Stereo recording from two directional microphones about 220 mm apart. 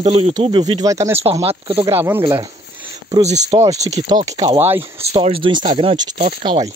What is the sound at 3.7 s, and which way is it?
Speech, 30° right (ahead or behind).